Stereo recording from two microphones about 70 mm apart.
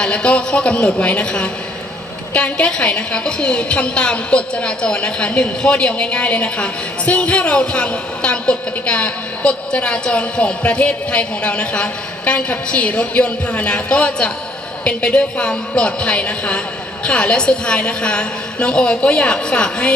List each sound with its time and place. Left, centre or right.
0.0 s a woman's voice: centre